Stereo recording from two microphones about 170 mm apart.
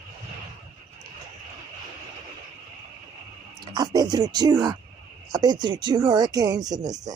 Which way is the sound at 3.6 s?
25° right (ahead or behind).